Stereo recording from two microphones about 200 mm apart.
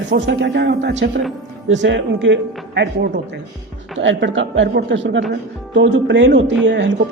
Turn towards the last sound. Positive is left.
turn(degrees=-60)  # may be behind; listen again after turning